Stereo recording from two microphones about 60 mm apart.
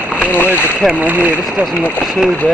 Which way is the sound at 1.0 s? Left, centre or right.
Right.